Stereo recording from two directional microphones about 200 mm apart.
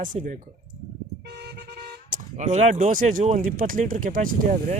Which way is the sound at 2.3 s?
35° right (ahead or behind).